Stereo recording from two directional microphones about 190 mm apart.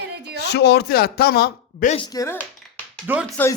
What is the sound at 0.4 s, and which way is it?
Speech, 60° left (ahead or behind).